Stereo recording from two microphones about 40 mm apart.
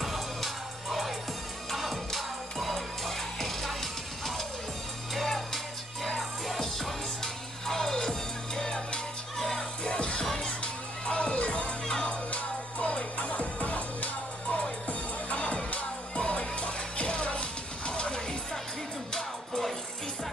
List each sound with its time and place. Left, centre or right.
0.0 s music: centre
9.4 s music: centre
9.8 s music: left
10.2 s music: centre
10.6 s music: left
11.9 s music: centre
12.3 s music: left; by 19.7 s centre